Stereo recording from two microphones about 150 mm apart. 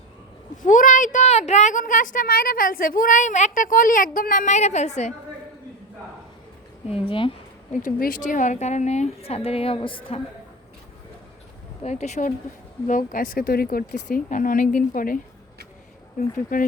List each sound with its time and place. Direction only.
0.5 s speech: 60° left (ahead or behind)
7.1 s speech: 35° left (ahead or behind)
7.9 s a woman's voice: 70° left (ahead or behind); by 10.2 s 35° left (ahead or behind)
11.8 s a woman's voice: 50° left (ahead or behind)
12.9 s speech: 65° left (ahead or behind)
16.5 s speech: 60° left (ahead or behind)